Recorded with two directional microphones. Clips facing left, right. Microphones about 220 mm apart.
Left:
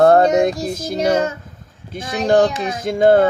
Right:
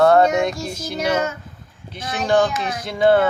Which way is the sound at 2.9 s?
45° left (ahead or behind).